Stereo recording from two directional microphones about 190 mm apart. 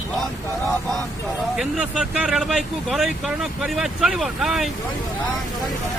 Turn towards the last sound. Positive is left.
turn(degrees=0)  # may be behind; listen again after turning